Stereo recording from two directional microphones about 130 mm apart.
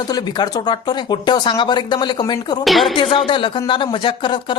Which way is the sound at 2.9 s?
40° left (ahead or behind).